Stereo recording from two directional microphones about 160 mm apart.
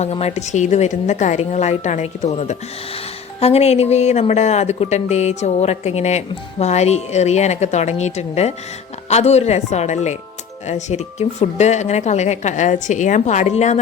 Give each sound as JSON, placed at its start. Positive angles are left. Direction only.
{"t": 0.0, "sound": "speech", "side_deg": 40}